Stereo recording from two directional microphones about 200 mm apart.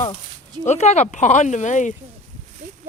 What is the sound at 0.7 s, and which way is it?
Speech, 35° left (ahead or behind).